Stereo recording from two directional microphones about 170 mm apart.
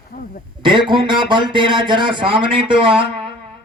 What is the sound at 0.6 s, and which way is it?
Speech, 30° right (ahead or behind).